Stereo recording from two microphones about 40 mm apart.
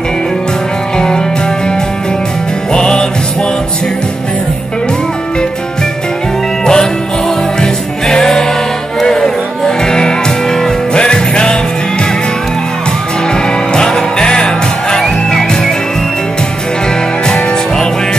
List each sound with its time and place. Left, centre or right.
0.9 s music: centre
2.7 s music: left
6.6 s music: centre
13.3 s music: centre